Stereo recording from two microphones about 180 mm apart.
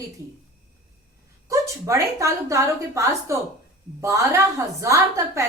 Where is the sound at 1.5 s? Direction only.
15° right (ahead or behind).